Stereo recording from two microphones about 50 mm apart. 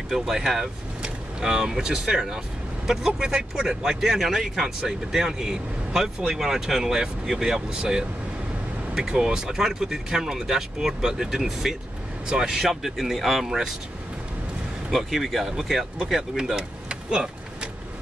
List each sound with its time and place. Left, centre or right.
0.1 s speech: centre
8.9 s speech: centre
14.9 s speech: centre
16.5 s vehicle: centre